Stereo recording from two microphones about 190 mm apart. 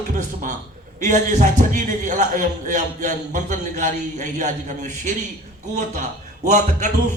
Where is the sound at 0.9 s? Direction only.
40° right (ahead or behind).